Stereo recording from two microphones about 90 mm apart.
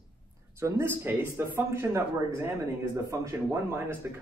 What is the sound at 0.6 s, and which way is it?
A man's voice, 25° right (ahead or behind).